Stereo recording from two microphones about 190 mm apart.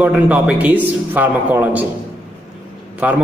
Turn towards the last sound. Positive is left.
turn(degrees=-10)  # may be behind; listen again after turning